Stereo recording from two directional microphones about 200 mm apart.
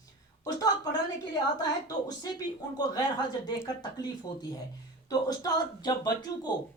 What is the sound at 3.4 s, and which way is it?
Speech, 20° left (ahead or behind).